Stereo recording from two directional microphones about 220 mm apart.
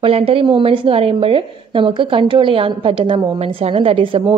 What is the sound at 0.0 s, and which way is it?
A woman's voice, 25° right (ahead or behind).